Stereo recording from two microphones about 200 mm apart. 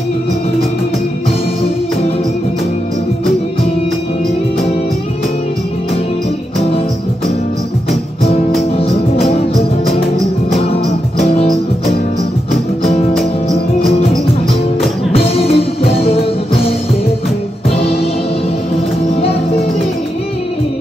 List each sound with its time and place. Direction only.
10.6 s music: 30° left (ahead or behind)
13.1 s music: centre (ahead or behind)
15.1 s music: 30° left (ahead or behind)